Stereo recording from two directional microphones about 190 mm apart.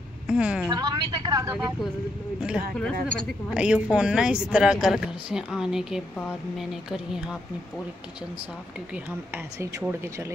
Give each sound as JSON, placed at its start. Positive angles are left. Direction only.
{"t": 0.3, "sound": "speech", "side_deg": -5}
{"t": 0.7, "sound": "a woman's voice", "side_deg": -20}
{"t": 2.4, "sound": "speech", "side_deg": -5}
{"t": 8.9, "sound": "speech", "side_deg": -10}